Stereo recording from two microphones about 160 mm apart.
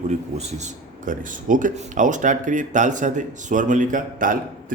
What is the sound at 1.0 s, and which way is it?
A man's voice, 55° right (ahead or behind).